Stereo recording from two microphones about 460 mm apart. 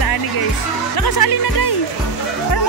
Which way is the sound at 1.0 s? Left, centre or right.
Left.